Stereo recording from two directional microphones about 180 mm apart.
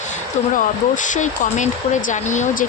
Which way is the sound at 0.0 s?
45° left (ahead or behind).